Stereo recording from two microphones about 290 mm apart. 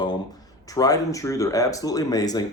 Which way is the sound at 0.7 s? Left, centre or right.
Centre.